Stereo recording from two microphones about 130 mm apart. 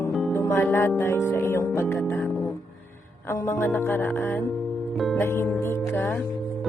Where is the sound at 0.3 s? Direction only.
20° left (ahead or behind).